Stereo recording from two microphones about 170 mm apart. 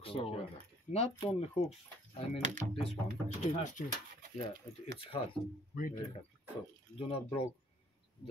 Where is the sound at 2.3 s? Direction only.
45° right (ahead or behind).